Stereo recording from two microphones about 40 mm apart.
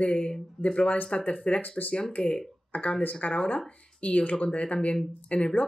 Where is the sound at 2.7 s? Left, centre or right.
Left.